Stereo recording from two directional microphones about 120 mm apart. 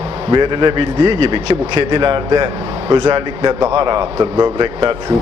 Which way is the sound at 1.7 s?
40° right (ahead or behind).